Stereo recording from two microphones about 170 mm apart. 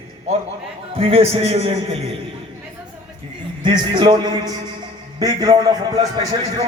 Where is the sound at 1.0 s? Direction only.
35° right (ahead or behind).